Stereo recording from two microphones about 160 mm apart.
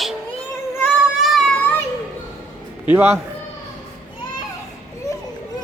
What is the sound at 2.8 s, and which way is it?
Speech, 10° right (ahead or behind).